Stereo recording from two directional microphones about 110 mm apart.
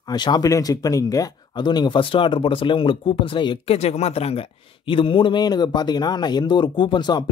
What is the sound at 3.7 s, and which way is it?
A man's voice, 75° left (ahead or behind).